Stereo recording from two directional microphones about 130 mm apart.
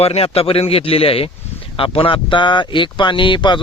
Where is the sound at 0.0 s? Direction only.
50° left (ahead or behind).